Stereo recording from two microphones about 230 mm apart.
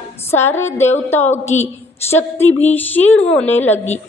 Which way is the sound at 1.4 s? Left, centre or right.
Left.